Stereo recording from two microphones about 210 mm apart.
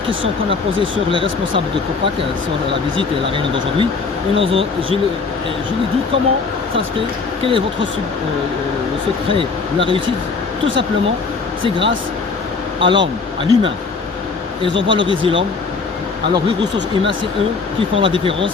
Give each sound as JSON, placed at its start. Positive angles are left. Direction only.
{"t": 0.8, "sound": "speech", "side_deg": -25}
{"t": 3.0, "sound": "speech", "side_deg": -25}
{"t": 7.4, "sound": "speech", "side_deg": -25}
{"t": 9.4, "sound": "speech", "side_deg": -25}
{"t": 12.8, "sound": "speech", "side_deg": -20}
{"t": 16.3, "sound": "speech", "side_deg": -20}